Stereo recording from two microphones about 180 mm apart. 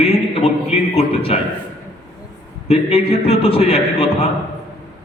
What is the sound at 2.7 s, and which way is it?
A man's voice, 35° left (ahead or behind).